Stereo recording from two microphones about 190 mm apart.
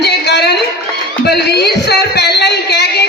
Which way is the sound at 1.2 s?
60° left (ahead or behind).